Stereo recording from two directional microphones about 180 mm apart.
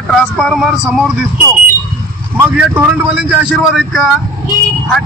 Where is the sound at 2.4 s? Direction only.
5° right (ahead or behind).